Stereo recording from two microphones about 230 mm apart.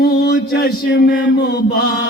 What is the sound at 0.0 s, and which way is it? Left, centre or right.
Mantra, left.